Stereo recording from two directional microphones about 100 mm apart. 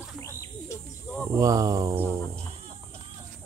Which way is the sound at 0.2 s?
30° left (ahead or behind).